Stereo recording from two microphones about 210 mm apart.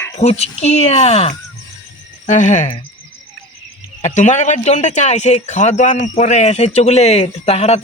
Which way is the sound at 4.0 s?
35° left (ahead or behind).